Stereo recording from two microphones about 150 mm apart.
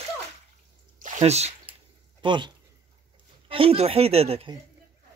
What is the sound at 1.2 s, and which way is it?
Speech, 45° right (ahead or behind).